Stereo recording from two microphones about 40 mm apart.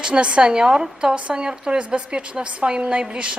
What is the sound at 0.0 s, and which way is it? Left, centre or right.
A woman's voice, right.